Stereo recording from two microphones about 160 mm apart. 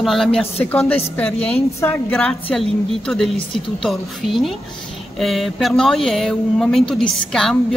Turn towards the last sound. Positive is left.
turn(degrees=5)  # may be behind; listen again after turning